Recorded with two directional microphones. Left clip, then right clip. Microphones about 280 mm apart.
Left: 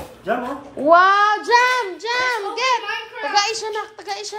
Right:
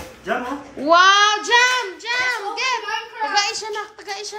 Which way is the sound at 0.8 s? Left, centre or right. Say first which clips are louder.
Even; centre.